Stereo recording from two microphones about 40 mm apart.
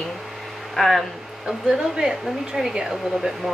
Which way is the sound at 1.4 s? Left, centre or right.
Centre.